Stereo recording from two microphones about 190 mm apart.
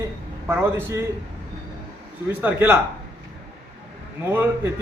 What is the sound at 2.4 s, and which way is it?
Speech, 10° right (ahead or behind).